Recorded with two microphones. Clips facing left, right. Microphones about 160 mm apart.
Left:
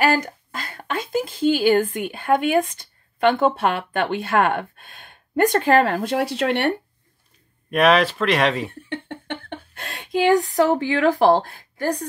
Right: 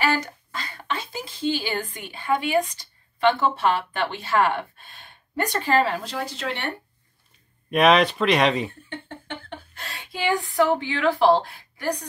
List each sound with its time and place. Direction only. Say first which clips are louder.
0.0 s speech: left 4 dB; 50° left (ahead or behind)
7.7 s speech: left 1 dB; 5° left (ahead or behind)
8.8 s a sound: left 6 dB; 70° left (ahead or behind); by 10.4 s 50° left (ahead or behind)
10.5 s a woman's voice: left 3 dB; 40° left (ahead or behind)